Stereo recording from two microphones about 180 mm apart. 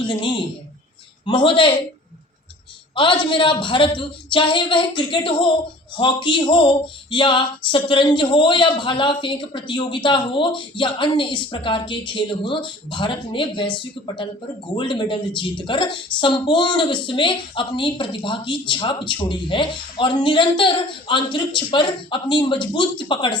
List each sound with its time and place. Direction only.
0.0 s a woman's voice: 25° left (ahead or behind)
2.9 s a woman's voice: 25° left (ahead or behind)